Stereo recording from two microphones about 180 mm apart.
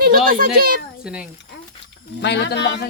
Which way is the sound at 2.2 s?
70° left (ahead or behind).